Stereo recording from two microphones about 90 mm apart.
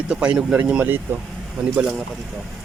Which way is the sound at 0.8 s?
25° right (ahead or behind).